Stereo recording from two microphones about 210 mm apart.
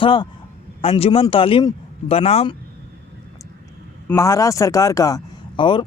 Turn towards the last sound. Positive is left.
turn(degrees=20)  # may be behind; listen again after turning